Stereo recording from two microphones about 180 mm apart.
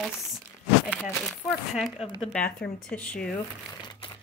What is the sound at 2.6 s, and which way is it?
Speech, 5° left (ahead or behind).